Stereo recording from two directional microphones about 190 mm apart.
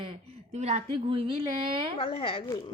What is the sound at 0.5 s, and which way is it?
A woman's voice, 35° right (ahead or behind).